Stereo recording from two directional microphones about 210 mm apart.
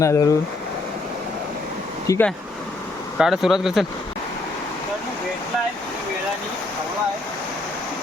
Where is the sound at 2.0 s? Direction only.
15° left (ahead or behind).